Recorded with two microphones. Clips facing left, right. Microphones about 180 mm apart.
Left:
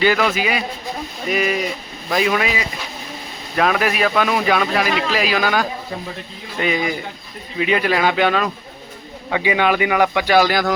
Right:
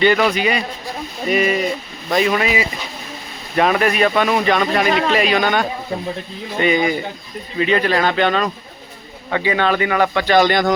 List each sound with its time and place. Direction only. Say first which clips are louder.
0.0 s speech: right 2 dB; centre (ahead or behind)
4.9 s speech: right 4 dB; 55° right (ahead or behind)
5.1 s speech: right 2 dB; centre (ahead or behind)